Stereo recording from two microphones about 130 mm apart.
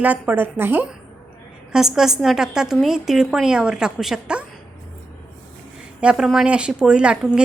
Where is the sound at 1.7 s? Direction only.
5° right (ahead or behind).